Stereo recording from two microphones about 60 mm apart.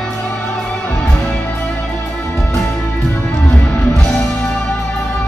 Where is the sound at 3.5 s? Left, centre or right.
Centre.